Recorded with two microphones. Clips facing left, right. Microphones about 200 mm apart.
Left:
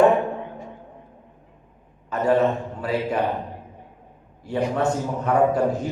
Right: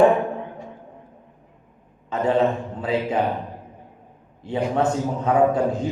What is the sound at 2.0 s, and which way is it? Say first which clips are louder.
Speech: left 1 dB; 25° right (ahead or behind).